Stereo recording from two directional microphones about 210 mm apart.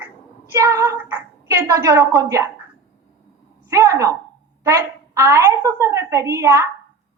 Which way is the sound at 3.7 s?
15° right (ahead or behind).